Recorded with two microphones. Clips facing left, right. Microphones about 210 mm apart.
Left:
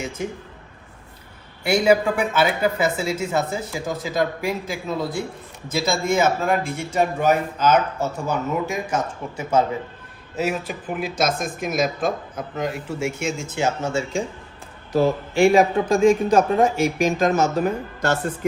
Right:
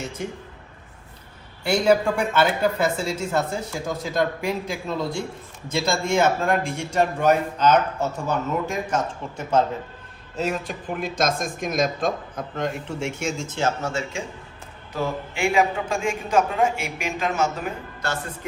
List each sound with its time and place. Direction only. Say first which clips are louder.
1.6 s a man's voice: left 1 dB; 5° left (ahead or behind)
14.9 s a man's voice: left 9 dB; 35° left (ahead or behind)